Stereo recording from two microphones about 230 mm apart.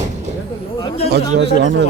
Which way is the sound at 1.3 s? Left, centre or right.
Right.